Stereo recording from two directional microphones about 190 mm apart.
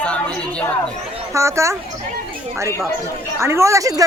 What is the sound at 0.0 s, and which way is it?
Chatter, 5° left (ahead or behind).